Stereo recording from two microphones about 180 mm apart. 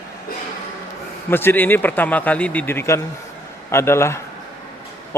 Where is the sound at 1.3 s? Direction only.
10° left (ahead or behind).